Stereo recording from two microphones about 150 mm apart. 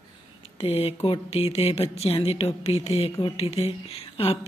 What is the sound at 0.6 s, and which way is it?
Speech, 40° left (ahead or behind).